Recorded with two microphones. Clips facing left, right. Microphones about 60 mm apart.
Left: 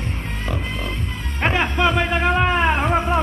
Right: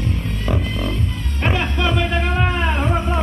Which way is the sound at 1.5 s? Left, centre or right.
Left.